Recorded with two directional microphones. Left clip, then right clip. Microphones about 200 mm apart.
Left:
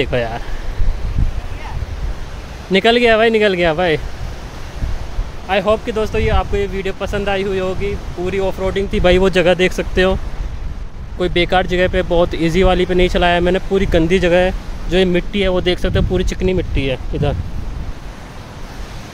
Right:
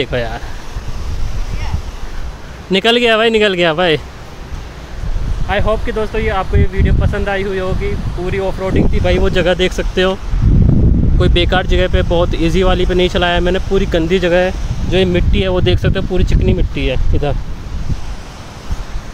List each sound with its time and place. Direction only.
0.0 s speech: 5° left (ahead or behind)
2.7 s speech: 10° right (ahead or behind)
5.5 s speech: 5° left (ahead or behind)
8.9 s speech: 50° left (ahead or behind)
9.3 s speech: 5° left (ahead or behind)
11.1 s speech: centre (ahead or behind)